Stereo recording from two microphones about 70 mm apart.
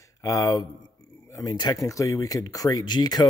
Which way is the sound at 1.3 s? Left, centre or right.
Left.